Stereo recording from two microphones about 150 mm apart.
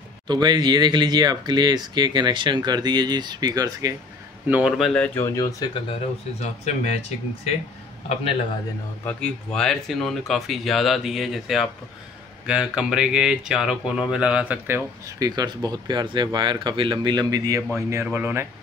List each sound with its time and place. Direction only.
0.3 s speech: 30° right (ahead or behind)
4.5 s speech: 10° right (ahead or behind)
4.7 s speech: 5° left (ahead or behind)
5.2 s speech: 20° left (ahead or behind)
5.8 s speech: 40° left (ahead or behind)
9.0 s speech: 5° left (ahead or behind); by 14.9 s 10° right (ahead or behind)
15.0 s speech: 25° right (ahead or behind)